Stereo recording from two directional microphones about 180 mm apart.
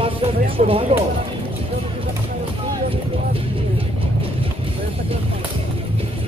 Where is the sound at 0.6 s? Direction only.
30° right (ahead or behind).